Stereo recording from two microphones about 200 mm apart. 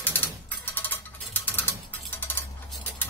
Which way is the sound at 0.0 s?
10° left (ahead or behind).